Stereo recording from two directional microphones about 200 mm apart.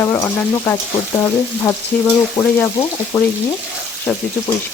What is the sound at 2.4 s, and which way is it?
Speech, 15° left (ahead or behind).